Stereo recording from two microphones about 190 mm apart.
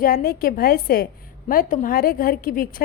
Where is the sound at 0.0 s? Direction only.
50° left (ahead or behind).